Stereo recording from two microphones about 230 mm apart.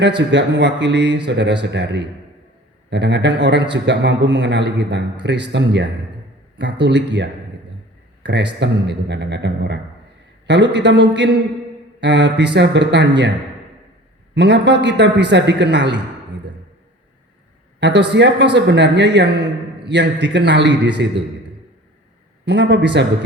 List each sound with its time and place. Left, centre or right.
0.0 s a man's voice: right
14.3 s a man's voice: right
17.7 s a man's voice: right
22.4 s a man's voice: right